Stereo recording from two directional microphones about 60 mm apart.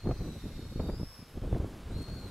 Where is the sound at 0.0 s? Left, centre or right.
Centre.